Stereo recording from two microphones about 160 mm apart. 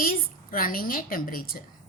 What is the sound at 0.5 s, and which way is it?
A woman's voice, 65° left (ahead or behind).